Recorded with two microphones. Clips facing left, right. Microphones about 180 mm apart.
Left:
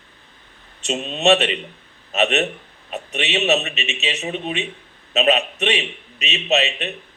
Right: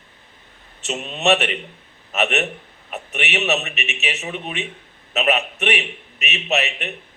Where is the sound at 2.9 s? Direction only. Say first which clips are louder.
Left 2 dB; 20° left (ahead or behind).